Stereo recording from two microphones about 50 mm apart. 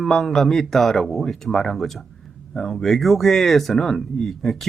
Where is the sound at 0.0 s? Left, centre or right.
Centre.